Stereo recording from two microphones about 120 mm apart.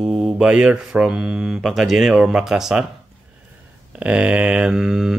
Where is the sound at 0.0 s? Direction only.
5° right (ahead or behind).